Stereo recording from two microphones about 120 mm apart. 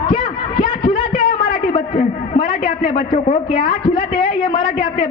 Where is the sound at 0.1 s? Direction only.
45° left (ahead or behind).